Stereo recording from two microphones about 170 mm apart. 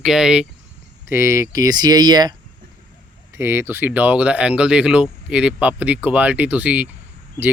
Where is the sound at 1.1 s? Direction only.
15° right (ahead or behind).